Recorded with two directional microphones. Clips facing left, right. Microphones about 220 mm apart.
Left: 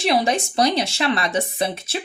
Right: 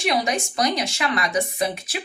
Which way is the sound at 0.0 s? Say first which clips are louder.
Left 3 dB; 30° left (ahead or behind).